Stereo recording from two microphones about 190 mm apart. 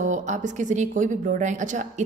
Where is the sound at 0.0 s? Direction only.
40° right (ahead or behind).